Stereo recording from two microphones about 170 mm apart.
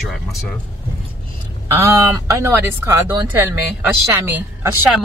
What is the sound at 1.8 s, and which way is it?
Speech, 15° right (ahead or behind).